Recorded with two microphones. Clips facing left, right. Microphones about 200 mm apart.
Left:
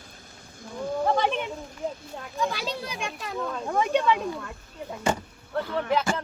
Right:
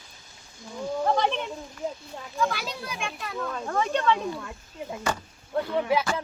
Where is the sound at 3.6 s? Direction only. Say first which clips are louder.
Left 2 dB; 15° left (ahead or behind).